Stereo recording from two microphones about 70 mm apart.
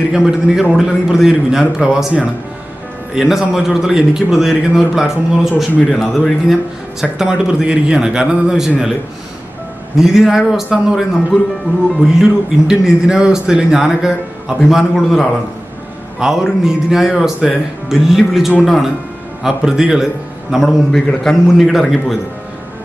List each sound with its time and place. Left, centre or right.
0.1 s a man's voice: centre
3.2 s a man's voice: centre
9.9 s a man's voice: centre
12.2 s a man's voice: centre
20.5 s a man's voice: centre